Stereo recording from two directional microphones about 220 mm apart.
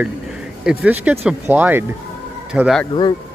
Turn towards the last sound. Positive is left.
turn(degrees=20)  # may be behind; listen again after turning